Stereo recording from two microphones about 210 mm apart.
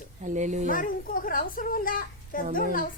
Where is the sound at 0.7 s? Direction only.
40° left (ahead or behind).